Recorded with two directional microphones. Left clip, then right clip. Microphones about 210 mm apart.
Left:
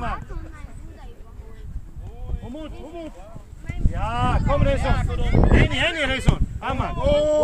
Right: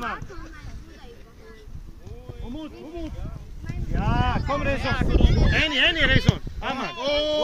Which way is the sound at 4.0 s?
25° left (ahead or behind).